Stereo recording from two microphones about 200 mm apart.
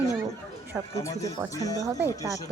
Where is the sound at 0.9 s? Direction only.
15° left (ahead or behind).